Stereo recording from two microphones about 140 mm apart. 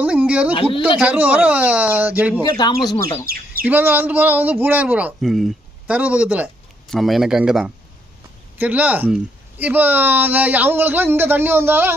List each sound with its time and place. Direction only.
0.0 s a sound: 10° right (ahead or behind)
0.8 s speech: 10° right (ahead or behind)
2.4 s speech: 30° left (ahead or behind)
3.3 s speech: 90° right
3.6 s speech: 15° right (ahead or behind)